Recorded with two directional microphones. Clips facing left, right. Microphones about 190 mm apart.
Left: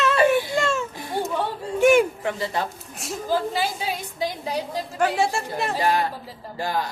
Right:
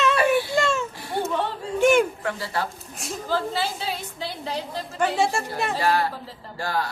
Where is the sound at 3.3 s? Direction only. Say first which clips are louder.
Left 2 dB; 15° left (ahead or behind).